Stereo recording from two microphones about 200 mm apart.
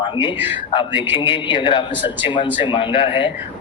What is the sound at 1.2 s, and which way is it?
A man's voice, 25° left (ahead or behind).